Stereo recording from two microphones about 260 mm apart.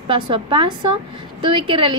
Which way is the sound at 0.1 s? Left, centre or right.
Centre.